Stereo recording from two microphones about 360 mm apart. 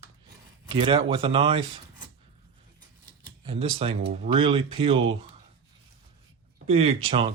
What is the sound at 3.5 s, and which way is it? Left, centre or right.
Speech, centre.